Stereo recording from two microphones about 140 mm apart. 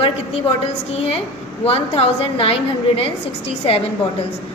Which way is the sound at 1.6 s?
45° left (ahead or behind).